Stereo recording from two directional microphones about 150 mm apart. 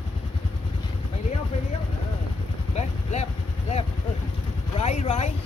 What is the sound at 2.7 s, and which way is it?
Vehicle, 45° left (ahead or behind).